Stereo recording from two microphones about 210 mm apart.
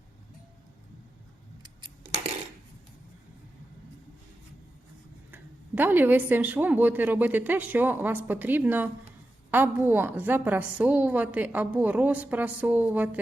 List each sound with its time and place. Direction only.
1.6 s scissors: 20° right (ahead or behind)
5.3 s speech: 10° right (ahead or behind)